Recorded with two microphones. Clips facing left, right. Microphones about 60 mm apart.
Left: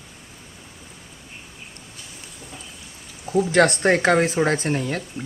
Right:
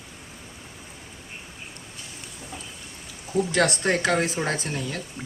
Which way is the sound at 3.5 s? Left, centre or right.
Left.